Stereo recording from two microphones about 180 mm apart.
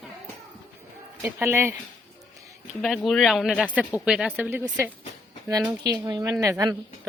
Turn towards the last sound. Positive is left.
turn(degrees=-20)  # may be behind; listen again after turning